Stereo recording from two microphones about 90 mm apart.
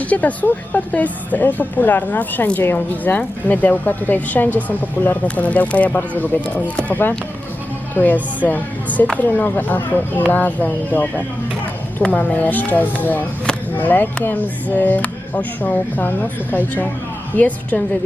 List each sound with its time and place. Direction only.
0.0 s a woman's voice: 15° left (ahead or behind)